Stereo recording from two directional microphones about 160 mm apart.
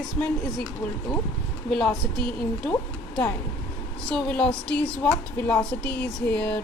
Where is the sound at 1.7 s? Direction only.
Centre (ahead or behind).